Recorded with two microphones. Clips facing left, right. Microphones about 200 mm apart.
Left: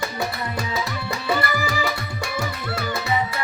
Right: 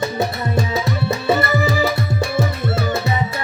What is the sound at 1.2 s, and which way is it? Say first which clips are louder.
Tabla: right 5 dB; 25° right (ahead or behind).